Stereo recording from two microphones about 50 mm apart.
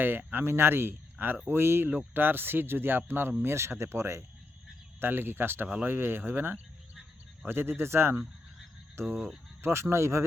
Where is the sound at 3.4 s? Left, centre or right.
Right.